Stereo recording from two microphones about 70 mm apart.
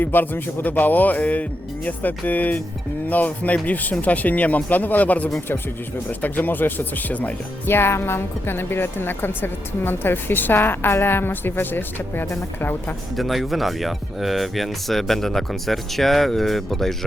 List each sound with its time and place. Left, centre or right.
0.0 s speech: left
7.7 s a woman's voice: left
13.1 s speech: centre